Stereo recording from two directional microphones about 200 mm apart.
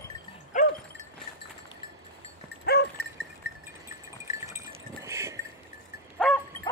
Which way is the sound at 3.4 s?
65° left (ahead or behind).